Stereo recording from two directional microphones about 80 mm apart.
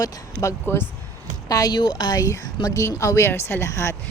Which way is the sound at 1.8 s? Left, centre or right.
Left.